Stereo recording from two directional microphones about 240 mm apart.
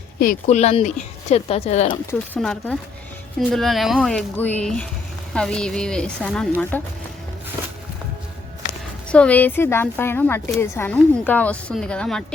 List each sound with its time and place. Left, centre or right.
0.2 s speech: left
2.0 s a woman's voice: centre
9.0 s a woman's voice: centre